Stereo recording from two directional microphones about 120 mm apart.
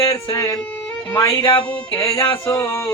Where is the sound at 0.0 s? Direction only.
30° left (ahead or behind).